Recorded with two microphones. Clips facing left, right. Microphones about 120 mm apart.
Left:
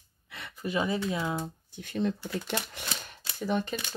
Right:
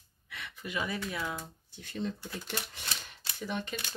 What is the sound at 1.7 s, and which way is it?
Speech, 55° left (ahead or behind).